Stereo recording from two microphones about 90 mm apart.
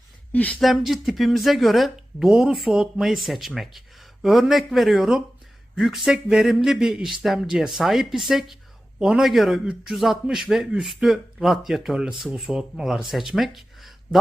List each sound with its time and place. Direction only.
0.3 s speech: 15° left (ahead or behind)
0.6 s speech: centre (ahead or behind)